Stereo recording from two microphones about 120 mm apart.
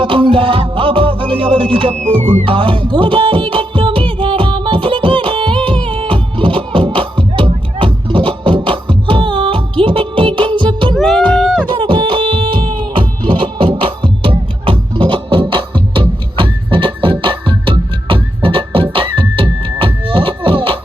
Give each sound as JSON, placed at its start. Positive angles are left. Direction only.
{"t": 0.0, "sound": "music", "side_deg": -45}
{"t": 10.9, "sound": "a sound", "side_deg": 0}
{"t": 11.7, "sound": "music", "side_deg": -45}